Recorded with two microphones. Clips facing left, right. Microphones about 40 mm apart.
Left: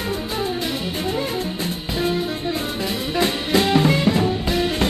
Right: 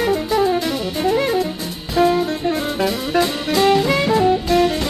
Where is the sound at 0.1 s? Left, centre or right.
Right.